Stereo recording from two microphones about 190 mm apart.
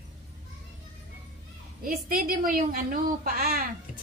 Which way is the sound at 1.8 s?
45° right (ahead or behind).